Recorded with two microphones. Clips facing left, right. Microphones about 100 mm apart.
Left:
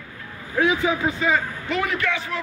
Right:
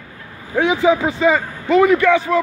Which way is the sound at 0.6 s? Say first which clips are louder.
Right 6 dB; 90° right.